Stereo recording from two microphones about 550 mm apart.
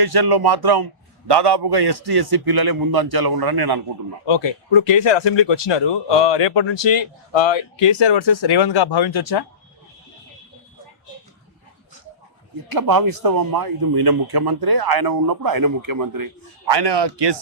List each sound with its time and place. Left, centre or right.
0.0 s speech: right
4.3 s speech: left
12.7 s speech: right